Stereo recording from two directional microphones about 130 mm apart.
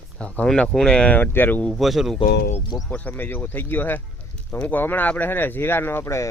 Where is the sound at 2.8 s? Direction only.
10° left (ahead or behind).